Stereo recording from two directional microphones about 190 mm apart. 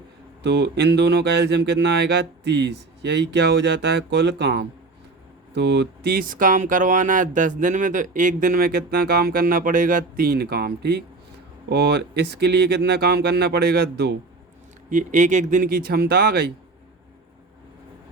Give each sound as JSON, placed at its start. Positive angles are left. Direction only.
{"t": 0.4, "sound": "speech", "side_deg": -65}
{"t": 14.8, "sound": "speech", "side_deg": -40}